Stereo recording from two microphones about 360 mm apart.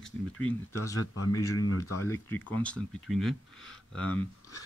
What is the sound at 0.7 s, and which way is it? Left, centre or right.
Speech, left.